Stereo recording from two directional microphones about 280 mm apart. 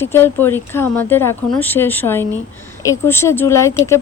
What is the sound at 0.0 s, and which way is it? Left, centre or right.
Speech, centre.